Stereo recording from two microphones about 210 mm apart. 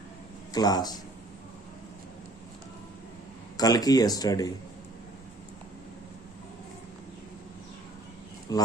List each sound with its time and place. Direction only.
0.5 s speech: 20° left (ahead or behind)
3.6 s speech: 15° left (ahead or behind)
8.5 s speech: 15° left (ahead or behind)